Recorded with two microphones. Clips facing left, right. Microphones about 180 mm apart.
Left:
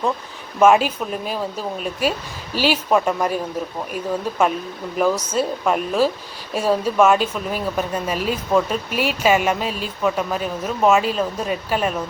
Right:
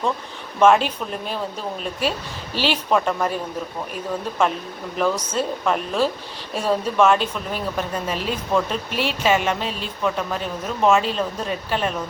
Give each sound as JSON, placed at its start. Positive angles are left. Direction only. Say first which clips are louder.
{"t": 0.6, "sound": "speech", "louder": "left 1 dB", "side_deg": 5}
{"t": 4.9, "sound": "speech", "louder": "left 3 dB", "side_deg": 10}